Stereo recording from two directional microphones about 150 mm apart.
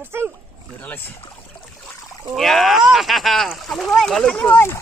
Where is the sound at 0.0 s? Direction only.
15° right (ahead or behind).